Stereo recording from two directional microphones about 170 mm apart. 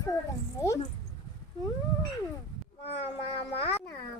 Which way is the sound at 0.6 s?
20° left (ahead or behind).